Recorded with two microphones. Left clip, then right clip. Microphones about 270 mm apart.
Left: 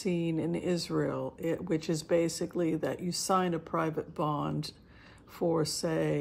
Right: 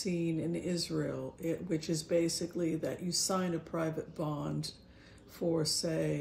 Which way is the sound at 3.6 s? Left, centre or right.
Centre.